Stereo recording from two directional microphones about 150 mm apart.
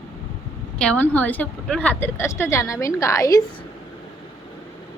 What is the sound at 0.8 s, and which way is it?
A woman's voice, 10° left (ahead or behind).